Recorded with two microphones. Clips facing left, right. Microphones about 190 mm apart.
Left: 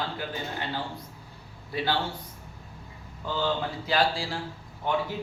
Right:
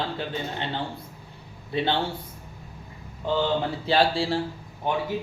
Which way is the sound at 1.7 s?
25° right (ahead or behind).